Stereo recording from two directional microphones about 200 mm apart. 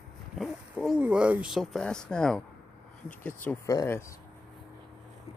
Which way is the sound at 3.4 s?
15° left (ahead or behind).